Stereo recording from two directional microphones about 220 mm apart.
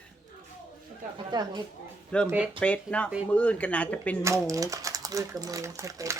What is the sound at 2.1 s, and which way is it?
Speech, 5° left (ahead or behind).